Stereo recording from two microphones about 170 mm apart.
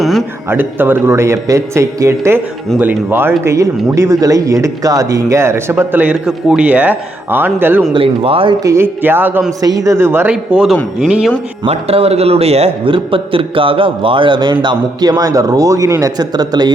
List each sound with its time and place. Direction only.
0.0 s a sound: centre (ahead or behind)
0.5 s speech: 10° right (ahead or behind)
7.9 s a man's voice: 35° right (ahead or behind)
8.6 s speech: 15° right (ahead or behind)
11.6 s a man's voice: 35° right (ahead or behind)